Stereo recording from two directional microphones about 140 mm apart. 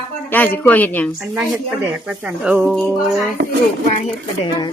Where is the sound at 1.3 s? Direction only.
5° right (ahead or behind).